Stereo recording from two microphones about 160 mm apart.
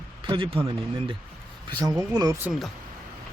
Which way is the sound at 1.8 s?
25° right (ahead or behind).